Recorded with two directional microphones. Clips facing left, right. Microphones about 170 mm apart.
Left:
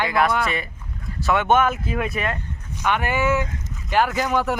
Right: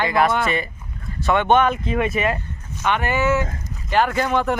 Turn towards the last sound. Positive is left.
turn(degrees=5)  # may be behind; listen again after turning